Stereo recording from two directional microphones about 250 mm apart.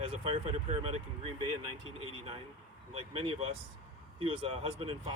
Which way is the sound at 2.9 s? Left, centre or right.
Right.